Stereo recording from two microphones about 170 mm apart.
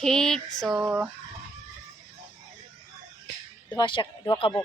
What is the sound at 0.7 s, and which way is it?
Fowl, 10° right (ahead or behind).